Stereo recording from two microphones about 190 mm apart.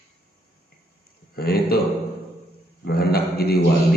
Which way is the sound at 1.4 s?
55° left (ahead or behind).